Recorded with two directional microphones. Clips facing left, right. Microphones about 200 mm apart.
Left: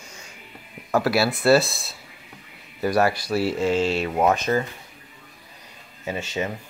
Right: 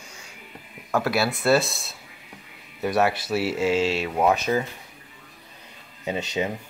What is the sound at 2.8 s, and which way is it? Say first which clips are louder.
Speech: left 1 dB; centre (ahead or behind).